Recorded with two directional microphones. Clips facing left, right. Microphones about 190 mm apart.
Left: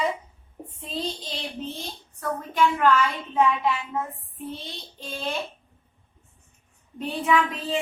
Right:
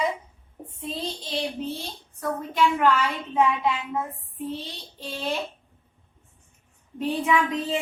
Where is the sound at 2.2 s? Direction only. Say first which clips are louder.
Even; 15° right (ahead or behind).